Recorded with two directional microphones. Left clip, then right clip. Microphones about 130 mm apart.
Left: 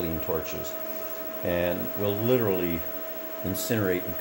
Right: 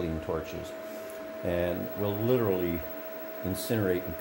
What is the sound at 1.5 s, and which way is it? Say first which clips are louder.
Speech: left 3 dB; 15° right (ahead or behind).